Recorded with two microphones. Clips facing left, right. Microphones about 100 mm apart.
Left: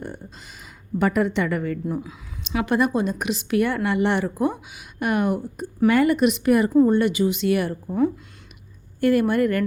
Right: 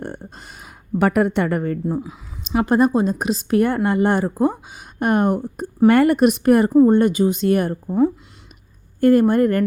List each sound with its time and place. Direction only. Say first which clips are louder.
0.0 s a sound: right 3 dB; 55° right (ahead or behind)
2.5 s a woman's voice: right 5 dB; 35° right (ahead or behind)
9.0 s speech: right 5 dB; 40° right (ahead or behind)